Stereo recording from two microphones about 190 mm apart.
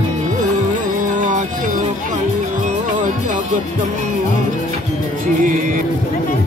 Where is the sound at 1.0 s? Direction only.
40° right (ahead or behind).